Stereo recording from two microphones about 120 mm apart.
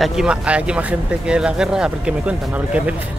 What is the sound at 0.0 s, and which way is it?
Speech, 5° right (ahead or behind).